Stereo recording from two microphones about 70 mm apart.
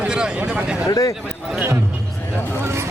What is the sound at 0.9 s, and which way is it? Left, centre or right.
Speech, left.